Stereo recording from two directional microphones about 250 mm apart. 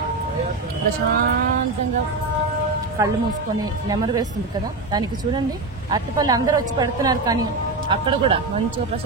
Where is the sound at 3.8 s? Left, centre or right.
Centre.